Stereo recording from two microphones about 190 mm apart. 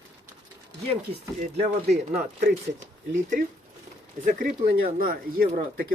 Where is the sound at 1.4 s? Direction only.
35° right (ahead or behind).